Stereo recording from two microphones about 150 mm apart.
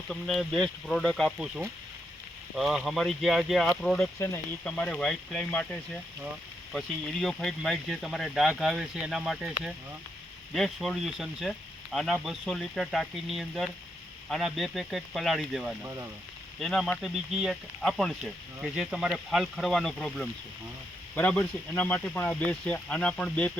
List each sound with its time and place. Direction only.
0.1 s speech: centre (ahead or behind)
15.8 s speech: 20° right (ahead or behind)
16.6 s speech: centre (ahead or behind)